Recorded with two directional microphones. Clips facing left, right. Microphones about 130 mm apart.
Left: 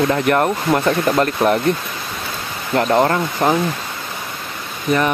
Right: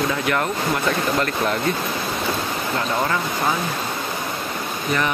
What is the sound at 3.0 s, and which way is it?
Speech, 45° left (ahead or behind).